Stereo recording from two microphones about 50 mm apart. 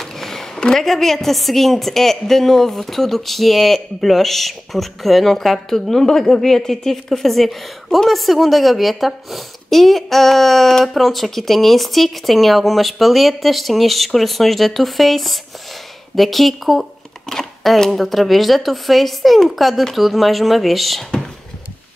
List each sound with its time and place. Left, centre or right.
0.0 s a sound: centre
0.6 s a woman's voice: centre
0.8 s a woman's voice: centre